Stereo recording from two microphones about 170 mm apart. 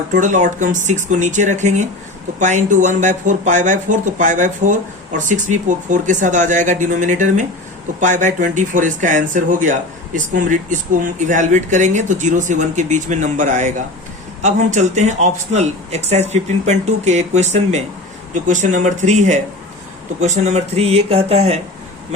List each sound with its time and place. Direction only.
0.1 s speech: 50° right (ahead or behind)